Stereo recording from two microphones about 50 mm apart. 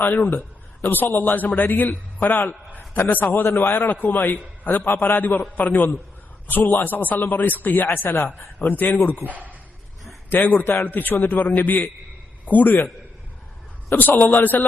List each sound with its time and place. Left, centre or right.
0.0 s a man's voice: left
8.1 s speech: left
8.5 s a man's voice: left
9.2 s speech: right
10.2 s a man's voice: left
14.2 s a man's voice: left